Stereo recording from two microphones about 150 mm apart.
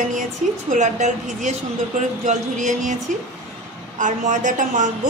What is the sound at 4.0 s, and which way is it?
Speech, 55° right (ahead or behind).